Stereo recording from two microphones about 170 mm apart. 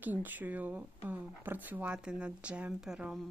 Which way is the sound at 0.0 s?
10° right (ahead or behind).